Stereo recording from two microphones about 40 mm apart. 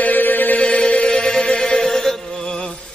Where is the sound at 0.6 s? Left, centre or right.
Left.